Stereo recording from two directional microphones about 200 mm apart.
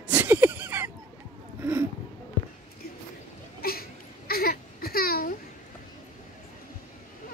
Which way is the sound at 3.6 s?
50° left (ahead or behind).